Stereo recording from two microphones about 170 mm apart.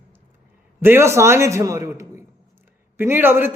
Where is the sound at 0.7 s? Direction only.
15° right (ahead or behind).